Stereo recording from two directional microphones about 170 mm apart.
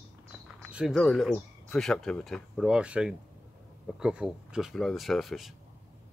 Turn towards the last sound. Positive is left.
turn(degrees=0)  # may be behind; listen again after turning